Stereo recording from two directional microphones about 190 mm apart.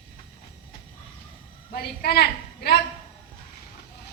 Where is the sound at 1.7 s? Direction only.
55° left (ahead or behind).